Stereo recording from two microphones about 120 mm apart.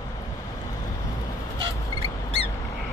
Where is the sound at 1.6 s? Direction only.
50° right (ahead or behind).